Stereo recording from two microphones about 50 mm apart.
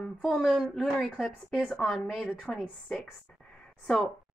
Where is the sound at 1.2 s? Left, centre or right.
Centre.